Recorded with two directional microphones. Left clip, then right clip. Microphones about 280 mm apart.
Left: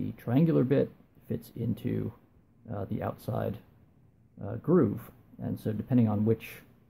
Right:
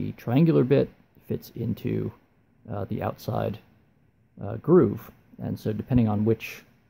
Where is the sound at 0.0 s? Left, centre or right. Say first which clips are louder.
Right 5 dB; right.